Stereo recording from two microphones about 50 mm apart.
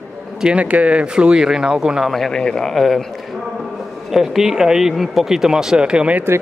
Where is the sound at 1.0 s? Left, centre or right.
Centre.